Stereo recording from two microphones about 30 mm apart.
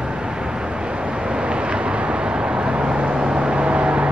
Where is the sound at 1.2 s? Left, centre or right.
Right.